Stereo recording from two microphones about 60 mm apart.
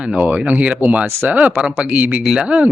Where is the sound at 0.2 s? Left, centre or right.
Right.